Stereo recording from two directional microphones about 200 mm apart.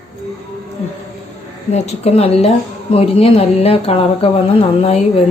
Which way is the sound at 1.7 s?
30° left (ahead or behind).